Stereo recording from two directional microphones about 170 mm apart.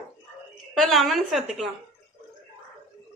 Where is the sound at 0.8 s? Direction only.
Centre (ahead or behind).